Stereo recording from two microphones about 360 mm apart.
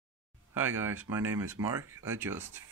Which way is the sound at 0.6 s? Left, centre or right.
Centre.